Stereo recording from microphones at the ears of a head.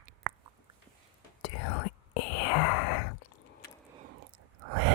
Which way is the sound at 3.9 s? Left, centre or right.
Right.